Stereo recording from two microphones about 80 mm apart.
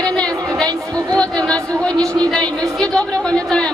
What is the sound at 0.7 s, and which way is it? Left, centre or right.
Speech, right.